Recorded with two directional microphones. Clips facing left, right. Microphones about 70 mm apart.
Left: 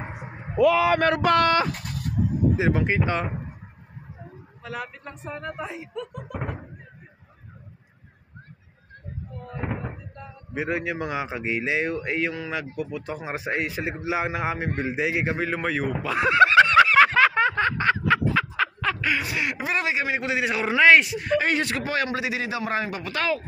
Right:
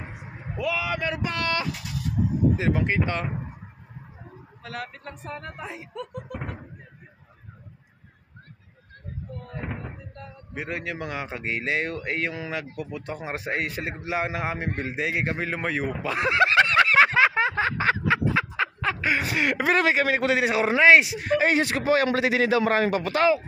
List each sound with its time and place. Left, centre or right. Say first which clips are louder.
0.0 s a sound: left 4 dB; left
0.6 s speech: left 9 dB; left
1.4 s speech: left 6 dB; left
2.5 s speech: left 2 dB; centre
4.6 s speech: left 1 dB; centre
9.7 s speech: left 4 dB; centre
18.6 s snicker: left 1 dB; centre
19.0 s snicker: right 4 dB; right
19.5 s a man's voice: right 5 dB; right
19.9 s a man's voice: right 4 dB; right
20.4 s a man's voice: right 2 dB; right
20.8 s speech: even; centre
21.5 s a man's voice: right 3 dB; right
22.0 s a man's voice: right 5 dB; right